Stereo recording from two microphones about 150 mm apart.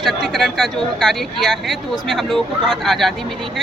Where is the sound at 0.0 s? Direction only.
Centre (ahead or behind).